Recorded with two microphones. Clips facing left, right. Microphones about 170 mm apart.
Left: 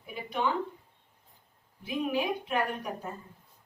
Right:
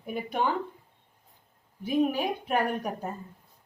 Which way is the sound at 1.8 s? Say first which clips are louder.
Right 4 dB; 45° right (ahead or behind).